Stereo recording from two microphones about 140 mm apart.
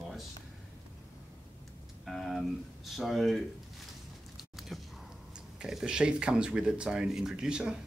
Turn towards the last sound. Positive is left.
turn(degrees=-5)  # may be behind; listen again after turning